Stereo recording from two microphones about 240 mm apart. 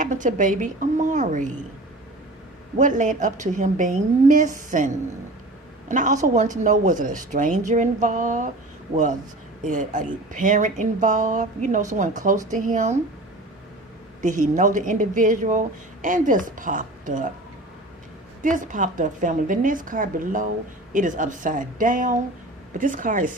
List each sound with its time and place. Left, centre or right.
0.0 s speech: right
2.7 s speech: right
5.9 s speech: right
9.6 s speech: right
14.2 s speech: right
18.4 s speech: right